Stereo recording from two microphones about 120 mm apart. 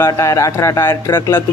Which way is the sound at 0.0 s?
25° left (ahead or behind).